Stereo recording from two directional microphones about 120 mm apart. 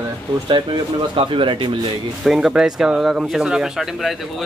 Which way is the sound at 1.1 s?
45° right (ahead or behind).